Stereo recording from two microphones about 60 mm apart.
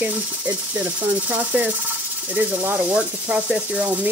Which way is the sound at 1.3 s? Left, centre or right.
Right.